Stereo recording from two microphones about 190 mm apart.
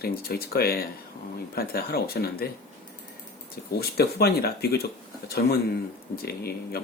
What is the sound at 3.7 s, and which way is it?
Speech, 55° left (ahead or behind).